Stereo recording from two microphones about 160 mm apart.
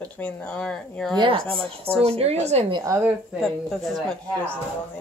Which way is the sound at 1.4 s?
5° left (ahead or behind).